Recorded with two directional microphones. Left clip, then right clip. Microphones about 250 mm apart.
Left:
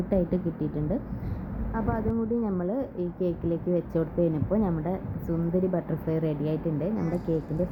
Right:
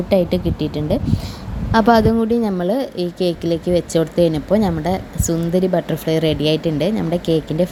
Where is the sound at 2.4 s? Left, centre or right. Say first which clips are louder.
Right 11 dB; right.